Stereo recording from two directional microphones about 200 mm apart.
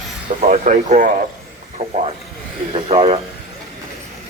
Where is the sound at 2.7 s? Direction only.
30° right (ahead or behind).